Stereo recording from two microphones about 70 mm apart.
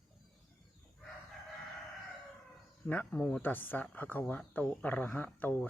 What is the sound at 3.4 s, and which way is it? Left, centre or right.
Speech, left.